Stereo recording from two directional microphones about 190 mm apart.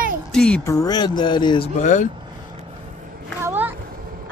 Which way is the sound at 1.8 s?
40° left (ahead or behind).